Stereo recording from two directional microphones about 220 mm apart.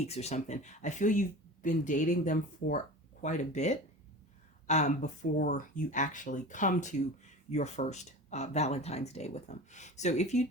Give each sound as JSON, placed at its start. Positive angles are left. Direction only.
{"t": 0.0, "sound": "speech", "side_deg": 30}